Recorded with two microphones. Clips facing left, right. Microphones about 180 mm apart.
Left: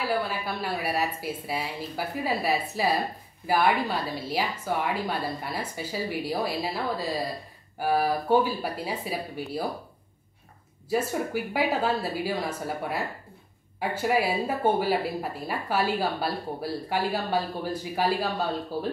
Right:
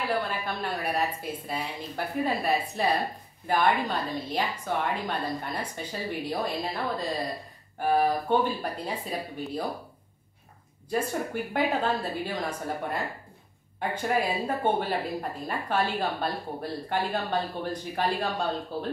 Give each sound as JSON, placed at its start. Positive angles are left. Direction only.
{"t": 0.3, "sound": "a woman's voice", "side_deg": 5}
{"t": 10.9, "sound": "a woman's voice", "side_deg": 5}